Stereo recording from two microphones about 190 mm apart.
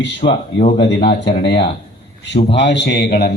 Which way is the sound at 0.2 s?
35° left (ahead or behind).